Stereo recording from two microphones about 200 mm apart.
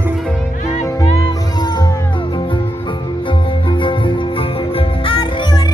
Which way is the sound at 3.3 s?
25° left (ahead or behind).